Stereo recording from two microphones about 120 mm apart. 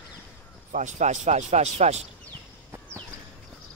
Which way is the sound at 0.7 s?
90° right.